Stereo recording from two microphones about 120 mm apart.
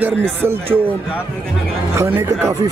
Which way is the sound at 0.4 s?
20° right (ahead or behind).